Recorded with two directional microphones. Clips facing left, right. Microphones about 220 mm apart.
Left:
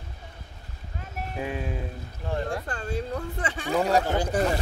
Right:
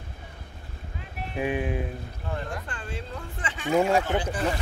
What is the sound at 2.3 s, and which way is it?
Speech, 35° left (ahead or behind).